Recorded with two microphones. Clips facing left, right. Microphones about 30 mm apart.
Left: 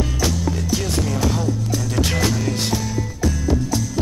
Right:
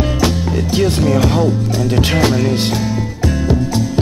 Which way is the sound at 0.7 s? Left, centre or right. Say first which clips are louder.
Right 12 dB; right.